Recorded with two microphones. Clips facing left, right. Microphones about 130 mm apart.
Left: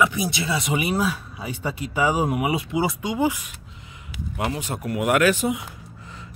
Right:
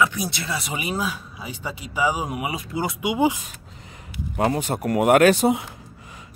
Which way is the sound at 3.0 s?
15° right (ahead or behind).